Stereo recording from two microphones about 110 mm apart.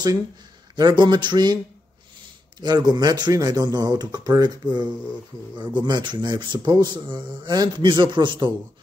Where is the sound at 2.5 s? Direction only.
35° right (ahead or behind).